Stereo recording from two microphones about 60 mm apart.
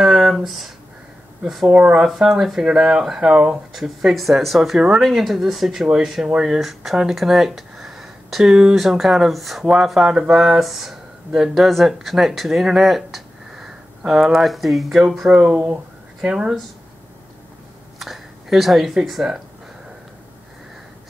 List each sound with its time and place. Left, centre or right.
0.0 s a sound: centre
1.4 s speech: centre
1.7 s speech: centre
2.1 s speech: centre
15.5 s speech: right
16.2 s speech: centre
17.9 s speech: centre